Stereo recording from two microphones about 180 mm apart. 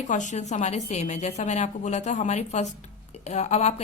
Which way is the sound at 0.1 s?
45° left (ahead or behind).